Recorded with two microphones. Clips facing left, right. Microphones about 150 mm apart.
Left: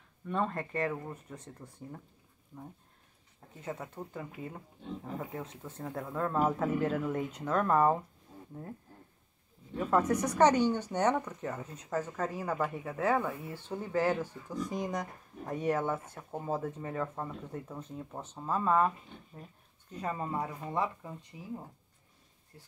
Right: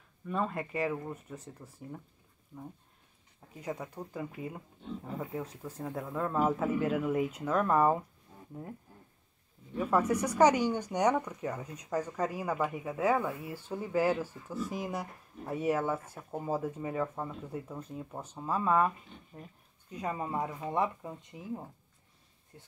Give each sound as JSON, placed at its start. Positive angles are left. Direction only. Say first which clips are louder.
{"t": 0.3, "sound": "speech", "louder": "even", "side_deg": -5}
{"t": 4.1, "sound": "speech", "louder": "right 3 dB", "side_deg": -15}
{"t": 9.8, "sound": "speech", "louder": "even", "side_deg": -10}
{"t": 19.9, "sound": "speech", "louder": "right 1 dB", "side_deg": -10}